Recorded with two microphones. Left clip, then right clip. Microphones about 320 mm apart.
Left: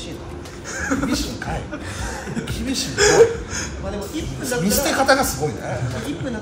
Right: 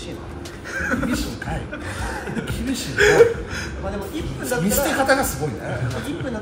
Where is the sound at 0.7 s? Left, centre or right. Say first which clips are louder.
Right 1 dB; left.